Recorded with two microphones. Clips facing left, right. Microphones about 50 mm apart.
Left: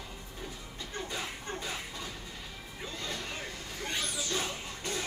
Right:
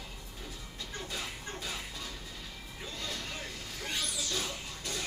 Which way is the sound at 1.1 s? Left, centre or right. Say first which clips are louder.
Left 2 dB; centre.